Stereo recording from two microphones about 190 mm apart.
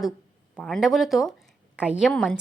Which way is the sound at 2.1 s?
5° left (ahead or behind).